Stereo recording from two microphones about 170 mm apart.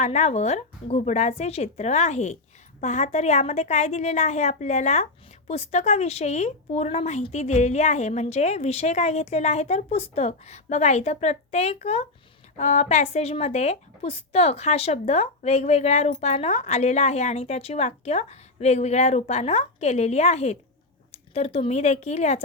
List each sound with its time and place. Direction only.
0.0 s a woman's voice: 40° left (ahead or behind)